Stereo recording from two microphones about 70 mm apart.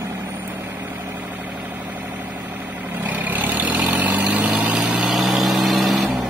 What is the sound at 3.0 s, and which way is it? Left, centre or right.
Vehicle, right.